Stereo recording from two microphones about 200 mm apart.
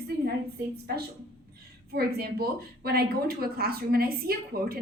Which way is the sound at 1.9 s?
50° right (ahead or behind).